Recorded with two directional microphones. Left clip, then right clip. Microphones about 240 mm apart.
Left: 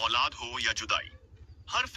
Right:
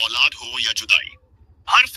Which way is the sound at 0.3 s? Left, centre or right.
Right.